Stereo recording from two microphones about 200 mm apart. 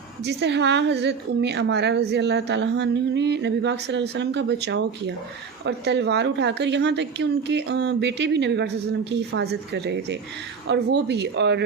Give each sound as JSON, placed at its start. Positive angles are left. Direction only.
{"t": 0.3, "sound": "a woman's voice", "side_deg": -60}